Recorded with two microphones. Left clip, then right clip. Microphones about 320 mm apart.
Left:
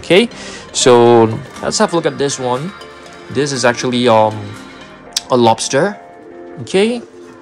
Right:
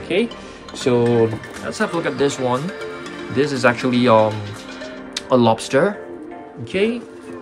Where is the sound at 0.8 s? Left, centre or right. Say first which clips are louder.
Left 10 dB; left.